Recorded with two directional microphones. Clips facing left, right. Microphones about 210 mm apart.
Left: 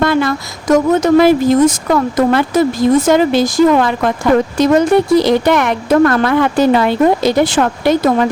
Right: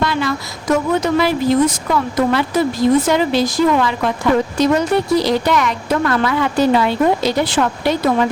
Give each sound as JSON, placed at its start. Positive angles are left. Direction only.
{"t": 0.0, "sound": "speech", "side_deg": 50}